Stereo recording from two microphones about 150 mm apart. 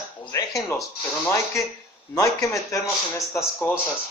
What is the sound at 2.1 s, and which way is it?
Speech, 20° left (ahead or behind).